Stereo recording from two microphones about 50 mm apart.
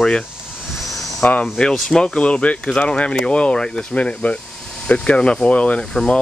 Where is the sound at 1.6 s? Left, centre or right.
Centre.